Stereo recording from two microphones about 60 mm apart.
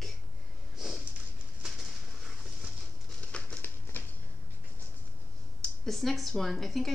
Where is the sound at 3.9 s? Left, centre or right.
Left.